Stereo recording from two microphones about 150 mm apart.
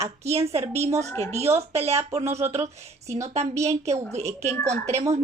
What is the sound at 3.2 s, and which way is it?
A woman's voice, 50° right (ahead or behind).